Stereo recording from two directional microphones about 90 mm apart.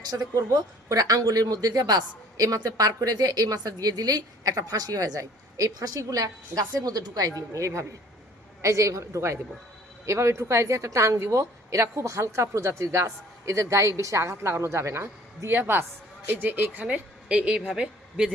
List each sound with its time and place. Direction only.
0.1 s a woman's voice: 45° right (ahead or behind); by 18.3 s 10° right (ahead or behind)